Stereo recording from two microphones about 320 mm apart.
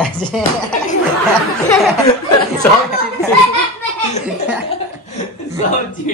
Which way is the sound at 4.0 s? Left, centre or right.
Left.